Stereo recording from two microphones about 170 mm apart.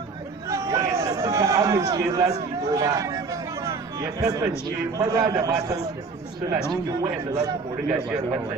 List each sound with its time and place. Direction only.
0.5 s a man's voice: 20° right (ahead or behind)